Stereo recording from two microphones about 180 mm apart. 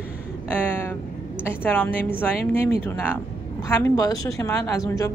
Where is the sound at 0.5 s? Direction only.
10° left (ahead or behind).